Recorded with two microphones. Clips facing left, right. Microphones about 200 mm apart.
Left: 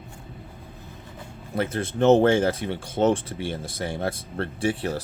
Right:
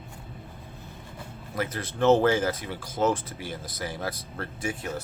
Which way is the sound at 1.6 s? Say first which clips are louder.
Left 4 dB; 25° left (ahead or behind).